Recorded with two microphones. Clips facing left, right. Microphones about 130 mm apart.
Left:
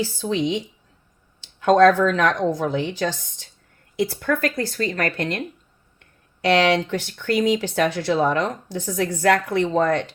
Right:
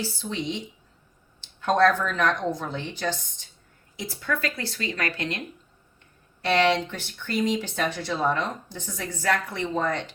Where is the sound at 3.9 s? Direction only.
60° left (ahead or behind).